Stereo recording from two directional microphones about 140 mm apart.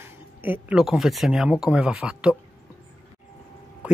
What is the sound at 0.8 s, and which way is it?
Speech, centre (ahead or behind).